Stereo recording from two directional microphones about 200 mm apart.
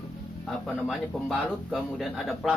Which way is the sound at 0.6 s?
Centre (ahead or behind).